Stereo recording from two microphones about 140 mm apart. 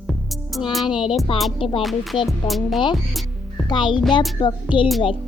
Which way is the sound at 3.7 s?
35° left (ahead or behind).